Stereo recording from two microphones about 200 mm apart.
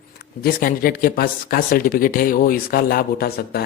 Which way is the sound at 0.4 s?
45° left (ahead or behind).